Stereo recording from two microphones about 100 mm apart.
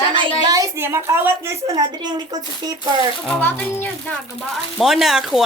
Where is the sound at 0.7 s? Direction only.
25° right (ahead or behind).